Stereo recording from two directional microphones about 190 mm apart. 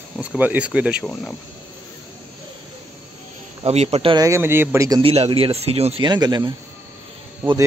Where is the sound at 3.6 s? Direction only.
35° right (ahead or behind).